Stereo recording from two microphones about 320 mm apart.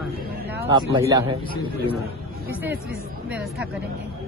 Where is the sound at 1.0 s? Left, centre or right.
Centre.